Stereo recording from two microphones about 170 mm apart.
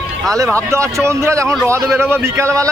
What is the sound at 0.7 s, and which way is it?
A man's voice, 15° right (ahead or behind).